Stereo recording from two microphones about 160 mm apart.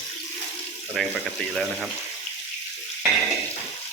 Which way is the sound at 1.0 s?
5° left (ahead or behind).